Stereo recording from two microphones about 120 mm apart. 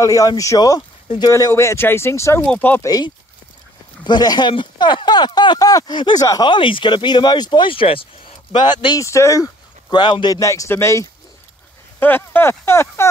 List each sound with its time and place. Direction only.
0.0 s a man's voice: 30° left (ahead or behind)
4.0 s speech: 35° left (ahead or behind)
9.0 s a man's voice: 25° left (ahead or behind)